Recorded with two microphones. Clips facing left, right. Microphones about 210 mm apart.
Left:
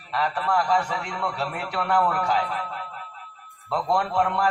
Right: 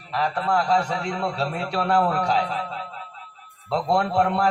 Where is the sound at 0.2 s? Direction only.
25° right (ahead or behind).